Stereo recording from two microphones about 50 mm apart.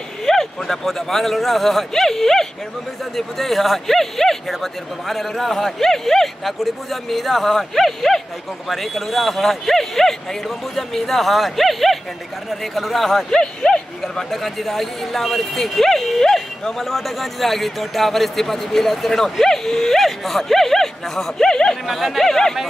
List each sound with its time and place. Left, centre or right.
0.2 s speech: centre
13.3 s a sound: centre
14.3 s speech: centre
21.8 s speech: centre